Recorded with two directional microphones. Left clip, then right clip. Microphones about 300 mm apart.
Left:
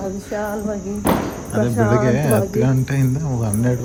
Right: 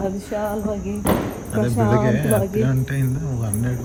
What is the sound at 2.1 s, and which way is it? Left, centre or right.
Speech, centre.